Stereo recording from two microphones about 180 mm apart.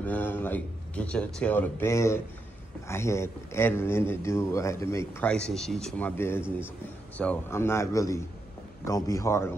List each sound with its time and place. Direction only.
0.0 s speech: 10° left (ahead or behind)